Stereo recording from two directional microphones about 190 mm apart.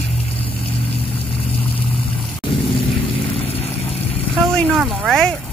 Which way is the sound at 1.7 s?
30° left (ahead or behind).